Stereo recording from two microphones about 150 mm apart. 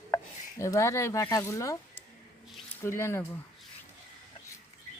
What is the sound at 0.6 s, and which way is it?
Speech, 20° left (ahead or behind).